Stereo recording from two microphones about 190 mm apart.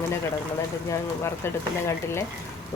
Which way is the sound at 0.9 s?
15° left (ahead or behind).